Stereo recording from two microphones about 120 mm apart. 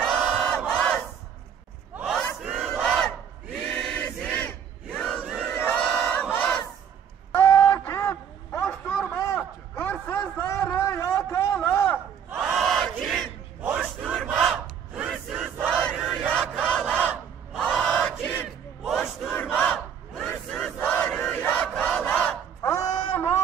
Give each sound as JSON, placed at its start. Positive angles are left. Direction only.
{"t": 0.0, "sound": "crowd", "side_deg": 5}
{"t": 2.0, "sound": "battle cry", "side_deg": 5}
{"t": 3.7, "sound": "choir", "side_deg": 10}
{"t": 5.7, "sound": "battle cry", "side_deg": 15}
{"t": 7.3, "sound": "a sound", "side_deg": 25}
{"t": 12.4, "sound": "battle cry", "side_deg": -5}
{"t": 15.0, "sound": "crowd", "side_deg": -5}
{"t": 17.6, "sound": "battle cry", "side_deg": 0}
{"t": 18.9, "sound": "battle cry", "side_deg": 0}
{"t": 19.5, "sound": "crowd", "side_deg": 15}
{"t": 20.2, "sound": "battle cry", "side_deg": 5}
{"t": 22.7, "sound": "a sound", "side_deg": 30}